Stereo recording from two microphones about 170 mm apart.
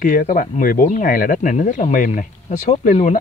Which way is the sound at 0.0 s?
55° left (ahead or behind).